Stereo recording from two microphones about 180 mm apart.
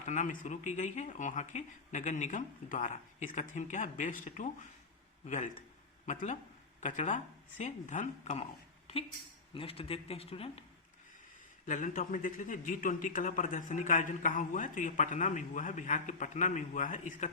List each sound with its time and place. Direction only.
0.0 s a man's voice: 45° left (ahead or behind)
9.6 s speech: 30° left (ahead or behind)
11.6 s a man's voice: 45° left (ahead or behind)